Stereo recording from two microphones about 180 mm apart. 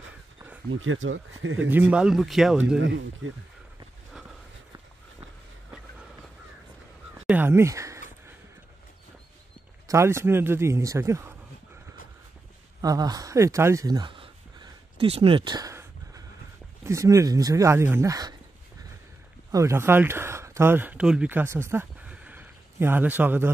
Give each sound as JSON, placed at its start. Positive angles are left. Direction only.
{"t": 0.7, "sound": "speech", "side_deg": -90}
{"t": 1.7, "sound": "speech", "side_deg": -10}
{"t": 7.2, "sound": "speech", "side_deg": -10}
{"t": 9.8, "sound": "speech", "side_deg": -15}
{"t": 12.8, "sound": "a sound", "side_deg": -20}
{"t": 16.8, "sound": "speech", "side_deg": -15}
{"t": 19.5, "sound": "speech", "side_deg": -15}